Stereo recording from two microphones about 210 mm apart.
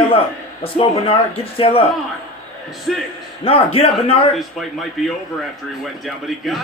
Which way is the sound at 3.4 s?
25° left (ahead or behind).